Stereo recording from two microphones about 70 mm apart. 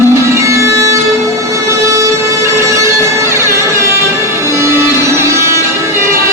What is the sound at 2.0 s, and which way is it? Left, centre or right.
Music, right.